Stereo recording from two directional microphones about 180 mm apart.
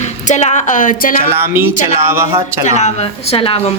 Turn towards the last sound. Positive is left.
turn(degrees=30)  # may be behind; listen again after turning